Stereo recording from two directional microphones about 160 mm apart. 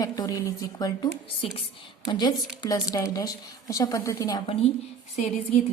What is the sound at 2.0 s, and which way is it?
A woman's voice, 25° left (ahead or behind).